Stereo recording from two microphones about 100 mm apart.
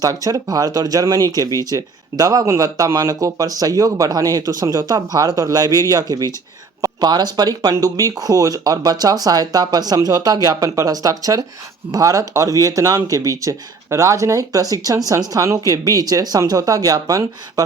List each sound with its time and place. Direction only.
0.0 s speech: 35° right (ahead or behind)